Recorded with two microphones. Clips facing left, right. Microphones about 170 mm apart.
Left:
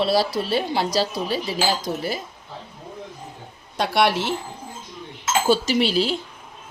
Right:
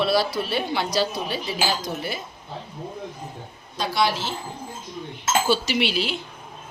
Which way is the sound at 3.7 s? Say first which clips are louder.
Left 4 dB; 65° left (ahead or behind).